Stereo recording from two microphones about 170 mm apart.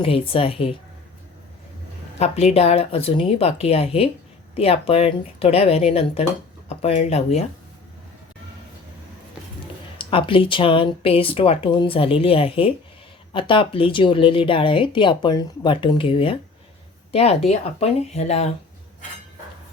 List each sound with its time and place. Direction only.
0.0 s speech: 35° left (ahead or behind)
2.1 s speech: 40° left (ahead or behind)
10.0 s speech: 30° left (ahead or behind)